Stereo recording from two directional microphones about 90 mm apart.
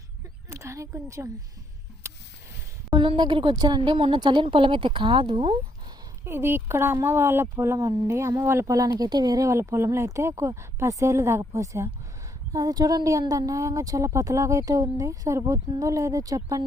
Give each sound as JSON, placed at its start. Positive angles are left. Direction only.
{"t": 0.5, "sound": "a woman's voice", "side_deg": -35}
{"t": 2.0, "sound": "a sound", "side_deg": -35}
{"t": 2.9, "sound": "a woman's voice", "side_deg": -60}
{"t": 3.5, "sound": "a woman's voice", "side_deg": -50}
{"t": 6.2, "sound": "speech", "side_deg": -25}
{"t": 12.5, "sound": "speech", "side_deg": -45}